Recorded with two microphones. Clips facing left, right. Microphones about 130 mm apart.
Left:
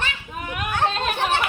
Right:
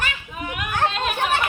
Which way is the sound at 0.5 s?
35° left (ahead or behind).